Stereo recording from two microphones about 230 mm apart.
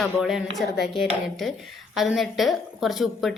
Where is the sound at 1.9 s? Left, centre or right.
Centre.